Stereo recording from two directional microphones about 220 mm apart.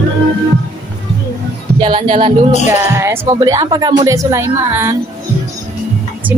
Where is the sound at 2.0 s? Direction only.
30° right (ahead or behind).